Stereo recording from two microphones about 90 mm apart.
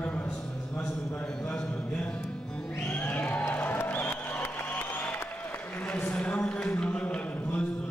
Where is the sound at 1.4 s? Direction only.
15° left (ahead or behind).